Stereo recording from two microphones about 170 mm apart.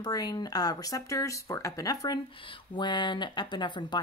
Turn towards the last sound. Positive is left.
turn(degrees=25)  # may be behind; listen again after turning